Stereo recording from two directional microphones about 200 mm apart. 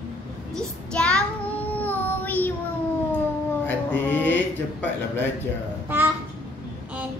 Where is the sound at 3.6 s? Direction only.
10° left (ahead or behind).